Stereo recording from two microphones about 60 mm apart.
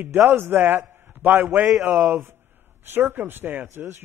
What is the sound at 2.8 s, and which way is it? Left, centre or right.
A man's voice, right.